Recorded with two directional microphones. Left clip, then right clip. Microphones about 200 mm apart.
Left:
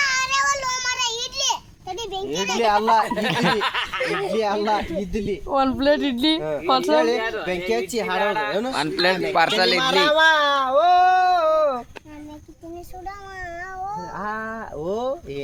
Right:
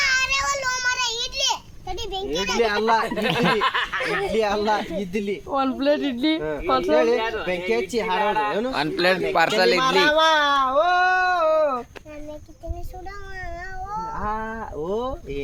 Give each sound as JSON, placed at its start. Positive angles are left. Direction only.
{"t": 0.0, "sound": "child singing", "side_deg": 5}
{"t": 2.6, "sound": "speech", "side_deg": 55}
{"t": 3.4, "sound": "snicker", "side_deg": 35}
{"t": 3.9, "sound": "speech", "side_deg": 10}
{"t": 4.3, "sound": "speech", "side_deg": 25}
{"t": 4.6, "sound": "speech", "side_deg": 10}
{"t": 4.9, "sound": "snicker", "side_deg": 35}
{"t": 5.5, "sound": "speech", "side_deg": 55}
{"t": 8.2, "sound": "snicker", "side_deg": 35}
{"t": 8.7, "sound": "speech", "side_deg": 5}
{"t": 9.8, "sound": "a sound", "side_deg": 55}
{"t": 14.2, "sound": "speech", "side_deg": 50}